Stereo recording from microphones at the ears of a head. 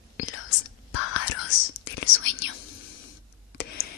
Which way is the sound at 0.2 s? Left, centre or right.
Left.